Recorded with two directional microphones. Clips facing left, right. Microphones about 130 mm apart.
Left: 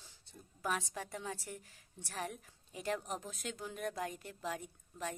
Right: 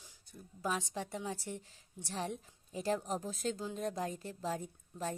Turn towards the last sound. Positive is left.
turn(degrees=-30)  # may be behind; listen again after turning